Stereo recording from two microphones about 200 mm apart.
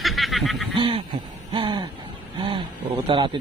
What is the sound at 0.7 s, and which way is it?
Speech, 25° right (ahead or behind).